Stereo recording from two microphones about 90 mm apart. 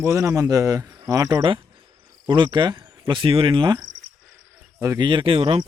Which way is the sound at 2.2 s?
60° right (ahead or behind).